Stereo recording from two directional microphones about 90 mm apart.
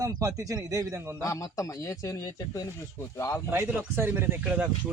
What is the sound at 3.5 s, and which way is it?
Speech, 20° right (ahead or behind).